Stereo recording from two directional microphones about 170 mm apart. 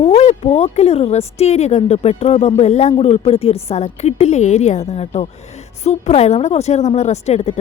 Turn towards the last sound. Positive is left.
turn(degrees=40)  # may be behind; listen again after turning